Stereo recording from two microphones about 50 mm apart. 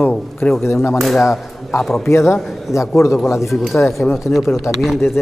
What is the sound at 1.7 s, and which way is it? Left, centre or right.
Speech, left.